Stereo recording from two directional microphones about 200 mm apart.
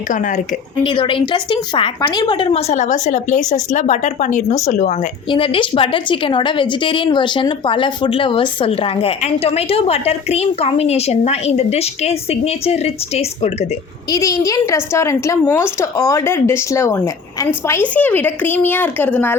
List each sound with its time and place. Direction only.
0.1 s a woman's voice: 40° left (ahead or behind)
0.9 s a woman's voice: 25° left (ahead or behind)
5.3 s a woman's voice: 25° left (ahead or behind)
14.1 s a woman's voice: 15° left (ahead or behind)